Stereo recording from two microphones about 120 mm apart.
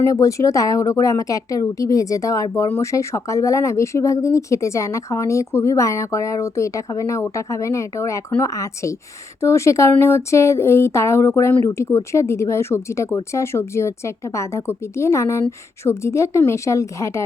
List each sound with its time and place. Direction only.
0.0 s speech: 25° left (ahead or behind)